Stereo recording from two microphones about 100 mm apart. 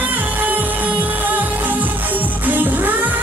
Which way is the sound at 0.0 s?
15° right (ahead or behind).